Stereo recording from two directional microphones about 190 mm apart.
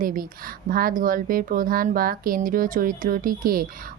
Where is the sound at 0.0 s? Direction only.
45° right (ahead or behind).